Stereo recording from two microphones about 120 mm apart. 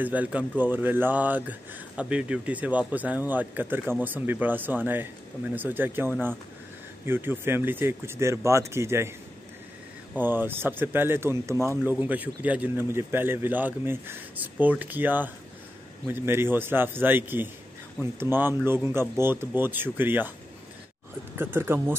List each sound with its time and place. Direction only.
0.0 s speech: 10° right (ahead or behind)
10.1 s speech: 15° right (ahead or behind)
21.4 s speech: 20° right (ahead or behind)